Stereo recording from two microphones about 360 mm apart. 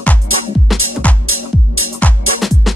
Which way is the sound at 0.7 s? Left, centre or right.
Centre.